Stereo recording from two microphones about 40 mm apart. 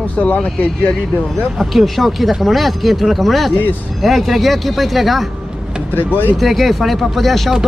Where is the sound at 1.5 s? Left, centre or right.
Centre.